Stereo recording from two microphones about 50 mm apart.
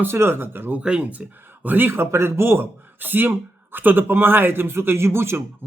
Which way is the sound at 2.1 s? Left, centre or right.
Right.